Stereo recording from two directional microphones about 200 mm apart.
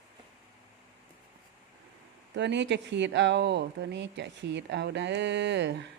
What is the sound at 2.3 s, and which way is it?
Speech, 60° right (ahead or behind).